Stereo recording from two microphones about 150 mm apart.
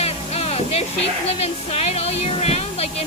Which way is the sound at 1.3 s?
45° left (ahead or behind).